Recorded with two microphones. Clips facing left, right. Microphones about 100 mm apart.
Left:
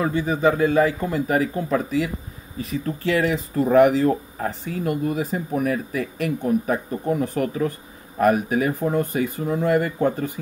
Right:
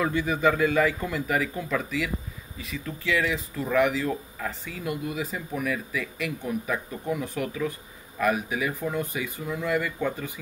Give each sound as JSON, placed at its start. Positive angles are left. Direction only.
{"t": 0.0, "sound": "speech", "side_deg": 35}